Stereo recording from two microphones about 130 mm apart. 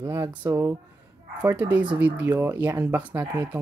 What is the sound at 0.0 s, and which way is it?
Speech, 20° right (ahead or behind).